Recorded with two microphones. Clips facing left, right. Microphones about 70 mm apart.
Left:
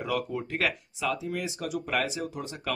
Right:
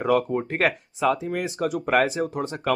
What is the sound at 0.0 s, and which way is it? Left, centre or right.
Speech, right.